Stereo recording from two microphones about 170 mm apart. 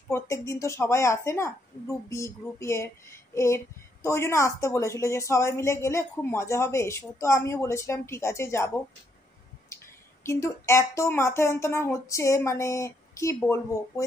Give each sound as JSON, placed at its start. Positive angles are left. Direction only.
{"t": 0.1, "sound": "speech", "side_deg": 15}
{"t": 9.7, "sound": "a sound", "side_deg": 15}
{"t": 10.2, "sound": "speech", "side_deg": 15}